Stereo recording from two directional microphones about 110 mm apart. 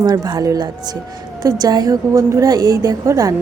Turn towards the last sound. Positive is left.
turn(degrees=-30)  # may be behind; listen again after turning